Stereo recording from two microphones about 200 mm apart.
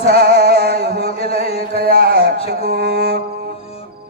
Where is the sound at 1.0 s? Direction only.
30° left (ahead or behind).